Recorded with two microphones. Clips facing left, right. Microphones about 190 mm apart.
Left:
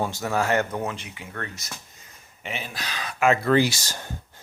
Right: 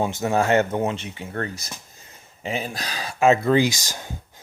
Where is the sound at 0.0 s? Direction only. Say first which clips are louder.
Right 4 dB; 20° right (ahead or behind).